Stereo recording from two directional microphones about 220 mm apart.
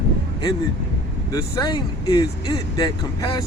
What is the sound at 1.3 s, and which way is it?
Speech, 15° left (ahead or behind).